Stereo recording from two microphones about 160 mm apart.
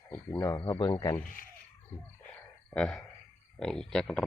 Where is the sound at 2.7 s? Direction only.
5° left (ahead or behind).